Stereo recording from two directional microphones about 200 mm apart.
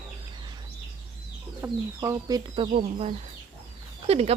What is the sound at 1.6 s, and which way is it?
Speech, 15° right (ahead or behind).